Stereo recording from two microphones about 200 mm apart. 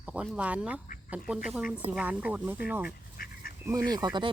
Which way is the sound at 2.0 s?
5° right (ahead or behind).